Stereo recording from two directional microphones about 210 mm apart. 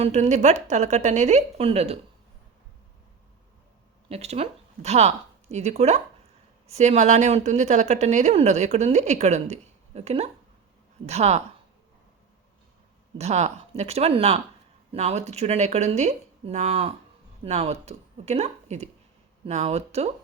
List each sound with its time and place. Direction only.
0.0 s speech: 35° right (ahead or behind)
4.1 s speech: 30° right (ahead or behind)
13.1 s speech: 30° right (ahead or behind)